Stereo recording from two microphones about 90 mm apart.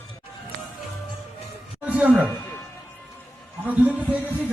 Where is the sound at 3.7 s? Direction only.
15° right (ahead or behind).